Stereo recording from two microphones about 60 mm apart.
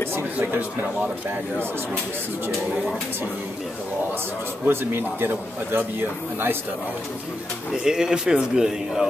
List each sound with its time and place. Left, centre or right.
0.4 s speech: right
4.6 s a man's voice: right
7.7 s speech: centre